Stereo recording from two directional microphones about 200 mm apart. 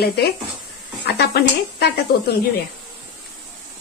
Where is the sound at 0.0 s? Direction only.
50° left (ahead or behind).